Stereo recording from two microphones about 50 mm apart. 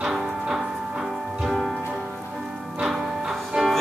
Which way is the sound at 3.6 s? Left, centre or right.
Centre.